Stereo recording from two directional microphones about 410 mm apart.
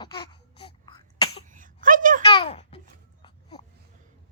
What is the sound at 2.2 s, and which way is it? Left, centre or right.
Babbling, centre.